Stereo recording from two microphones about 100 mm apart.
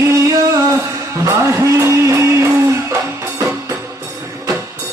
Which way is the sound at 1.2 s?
30° right (ahead or behind).